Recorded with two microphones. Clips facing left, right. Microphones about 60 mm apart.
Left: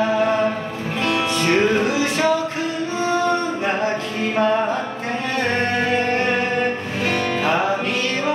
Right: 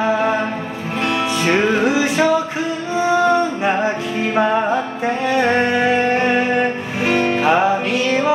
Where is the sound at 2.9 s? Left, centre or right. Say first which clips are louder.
Right 6 dB; centre.